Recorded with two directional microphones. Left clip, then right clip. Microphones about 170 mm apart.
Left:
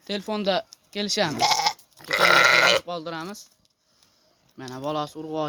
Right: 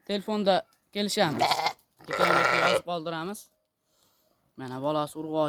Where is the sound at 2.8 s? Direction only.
40° right (ahead or behind).